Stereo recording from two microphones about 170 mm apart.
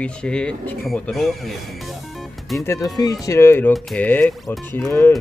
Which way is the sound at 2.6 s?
20° left (ahead or behind).